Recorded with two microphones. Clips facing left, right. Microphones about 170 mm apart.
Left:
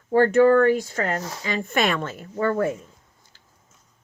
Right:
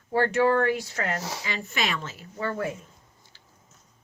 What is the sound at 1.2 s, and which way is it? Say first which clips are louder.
Speech: left 1 dB; 5° right (ahead or behind).